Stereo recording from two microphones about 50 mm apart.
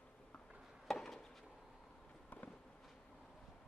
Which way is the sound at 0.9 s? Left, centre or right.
Centre.